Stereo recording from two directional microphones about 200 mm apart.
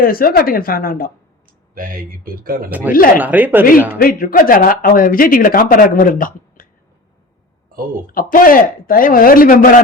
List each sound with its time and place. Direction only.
0.0 s speech: 45° left (ahead or behind)
1.7 s speech: 45° right (ahead or behind)
2.6 s speech: 10° right (ahead or behind)
3.9 s speech: 45° left (ahead or behind)
8.1 s speech: 45° left (ahead or behind)